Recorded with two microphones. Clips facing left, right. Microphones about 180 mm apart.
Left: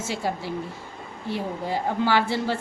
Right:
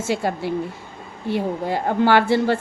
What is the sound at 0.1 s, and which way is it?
A woman's voice, 60° right (ahead or behind).